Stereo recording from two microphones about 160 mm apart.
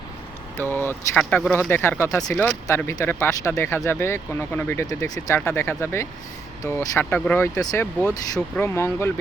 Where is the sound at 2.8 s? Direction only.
15° left (ahead or behind).